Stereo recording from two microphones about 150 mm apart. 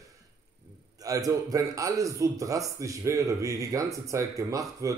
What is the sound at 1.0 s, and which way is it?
A man's voice, 25° right (ahead or behind).